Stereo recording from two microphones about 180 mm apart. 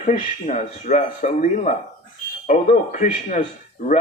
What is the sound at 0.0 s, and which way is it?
Speech, 45° left (ahead or behind).